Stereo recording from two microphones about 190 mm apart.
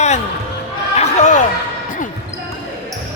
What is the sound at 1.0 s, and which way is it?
Chatter, 40° left (ahead or behind).